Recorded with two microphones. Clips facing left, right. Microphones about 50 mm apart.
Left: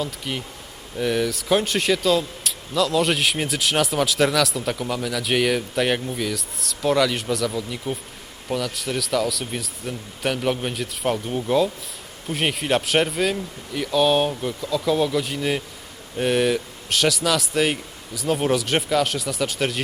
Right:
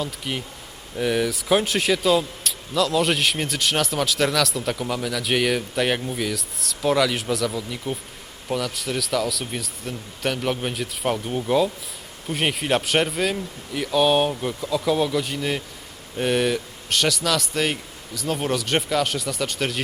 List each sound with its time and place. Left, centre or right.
0.0 s a man's voice: centre